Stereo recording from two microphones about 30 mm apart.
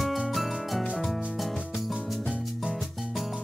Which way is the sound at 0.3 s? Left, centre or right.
Centre.